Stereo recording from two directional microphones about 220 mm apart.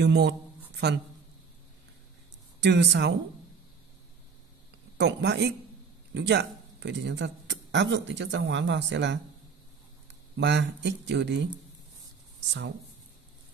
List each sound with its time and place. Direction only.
0.0 s speech: 50° right (ahead or behind)
2.6 s speech: 50° right (ahead or behind)
4.9 s speech: 50° right (ahead or behind)
10.3 s speech: 55° right (ahead or behind)